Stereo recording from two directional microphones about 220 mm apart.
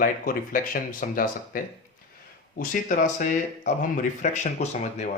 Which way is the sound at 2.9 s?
35° left (ahead or behind).